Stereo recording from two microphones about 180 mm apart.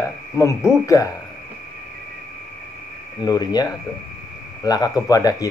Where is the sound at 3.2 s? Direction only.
20° left (ahead or behind).